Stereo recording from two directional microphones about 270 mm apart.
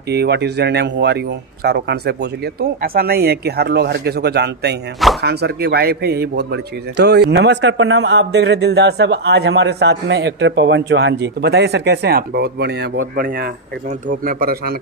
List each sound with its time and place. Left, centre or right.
0.1 s a man's voice: right